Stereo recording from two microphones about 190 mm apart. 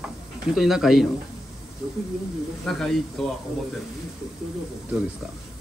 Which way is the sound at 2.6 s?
Centre (ahead or behind).